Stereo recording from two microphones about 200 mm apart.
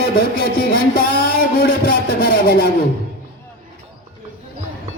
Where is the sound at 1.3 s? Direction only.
50° left (ahead or behind).